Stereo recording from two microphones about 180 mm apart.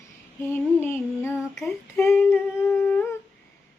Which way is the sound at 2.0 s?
15° left (ahead or behind).